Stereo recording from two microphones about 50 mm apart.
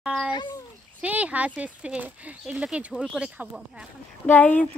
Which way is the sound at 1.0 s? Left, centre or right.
Right.